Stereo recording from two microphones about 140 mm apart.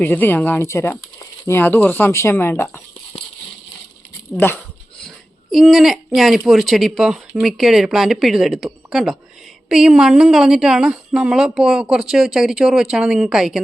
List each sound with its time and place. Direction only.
0.0 s speech: 15° left (ahead or behind)
4.4 s a sound: 15° left (ahead or behind); by 6.0 s centre (ahead or behind)
6.1 s a woman's voice: centre (ahead or behind)